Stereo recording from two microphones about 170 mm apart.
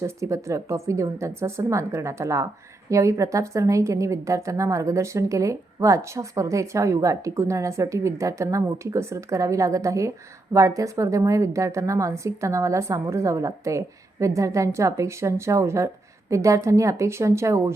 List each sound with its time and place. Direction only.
0.0 s a woman's voice: 15° right (ahead or behind)